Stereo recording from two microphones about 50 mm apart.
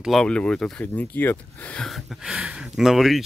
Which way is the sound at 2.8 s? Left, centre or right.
Centre.